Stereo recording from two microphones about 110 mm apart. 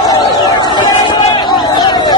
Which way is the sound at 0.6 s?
45° left (ahead or behind).